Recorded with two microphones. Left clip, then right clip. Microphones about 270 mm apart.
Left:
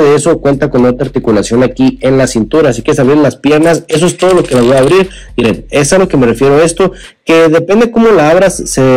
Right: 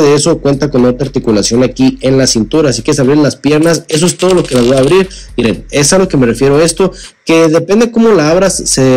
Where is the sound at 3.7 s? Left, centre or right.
Centre.